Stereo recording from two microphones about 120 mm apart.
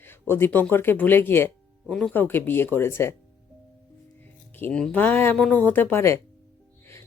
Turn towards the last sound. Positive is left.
turn(degrees=20)  # may be behind; listen again after turning